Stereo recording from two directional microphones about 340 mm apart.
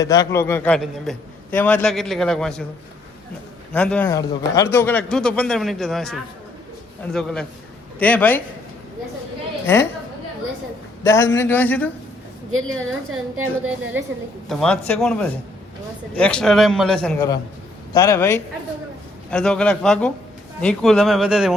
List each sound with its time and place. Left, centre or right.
0.0 s a man's voice: centre
3.7 s a man's voice: centre
11.0 s a man's voice: centre
12.6 s a woman's voice: right
14.0 s a woman's voice: centre